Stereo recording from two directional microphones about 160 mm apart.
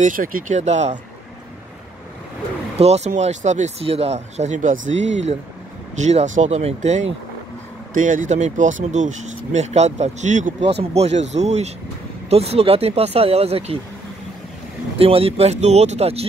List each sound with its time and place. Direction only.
0.0 s speech: 60° right (ahead or behind)
2.7 s speech: 40° right (ahead or behind)
15.0 s speech: 35° right (ahead or behind)